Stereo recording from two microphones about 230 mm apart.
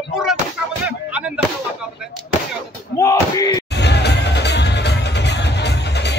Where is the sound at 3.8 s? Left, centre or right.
Left.